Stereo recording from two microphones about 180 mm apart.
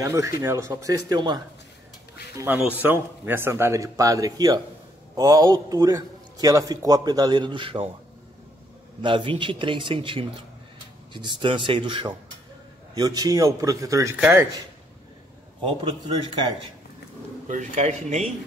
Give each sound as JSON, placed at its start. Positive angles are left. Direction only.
{"t": 0.0, "sound": "speech", "side_deg": -15}
{"t": 2.3, "sound": "a man's voice", "side_deg": -10}
{"t": 9.0, "sound": "a man's voice", "side_deg": -30}
{"t": 17.5, "sound": "speech", "side_deg": -40}